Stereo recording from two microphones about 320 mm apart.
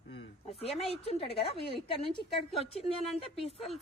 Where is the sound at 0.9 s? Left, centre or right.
Centre.